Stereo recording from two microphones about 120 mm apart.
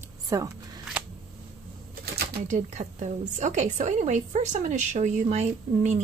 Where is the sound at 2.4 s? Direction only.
85° right.